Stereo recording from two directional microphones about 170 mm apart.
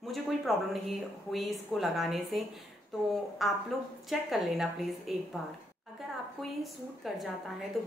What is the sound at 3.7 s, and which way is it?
A woman's voice, centre (ahead or behind).